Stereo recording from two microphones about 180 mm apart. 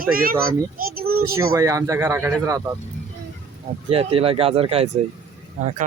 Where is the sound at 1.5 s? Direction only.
15° right (ahead or behind).